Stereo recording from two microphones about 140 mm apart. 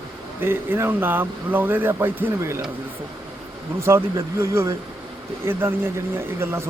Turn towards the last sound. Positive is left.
turn(degrees=-20)  # may be behind; listen again after turning